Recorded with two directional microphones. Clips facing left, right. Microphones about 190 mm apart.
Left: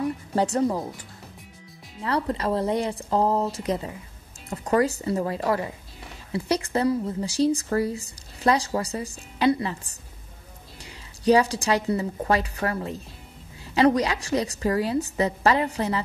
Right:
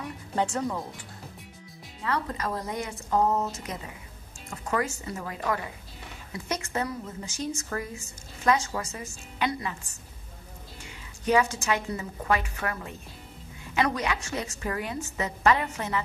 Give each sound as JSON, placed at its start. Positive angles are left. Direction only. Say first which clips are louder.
{"t": 0.0, "sound": "speech", "louder": "left 5 dB", "side_deg": 35}
{"t": 2.0, "sound": "a woman's voice", "louder": "left 5 dB", "side_deg": 35}